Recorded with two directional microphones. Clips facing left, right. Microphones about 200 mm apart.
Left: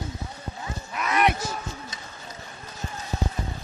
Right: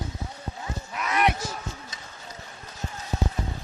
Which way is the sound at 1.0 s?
55° left (ahead or behind).